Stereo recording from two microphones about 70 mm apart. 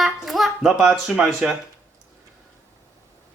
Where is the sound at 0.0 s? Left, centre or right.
Centre.